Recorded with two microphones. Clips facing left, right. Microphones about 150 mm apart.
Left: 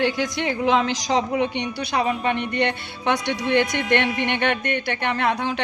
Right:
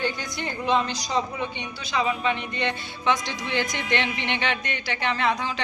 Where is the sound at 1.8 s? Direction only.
60° left (ahead or behind).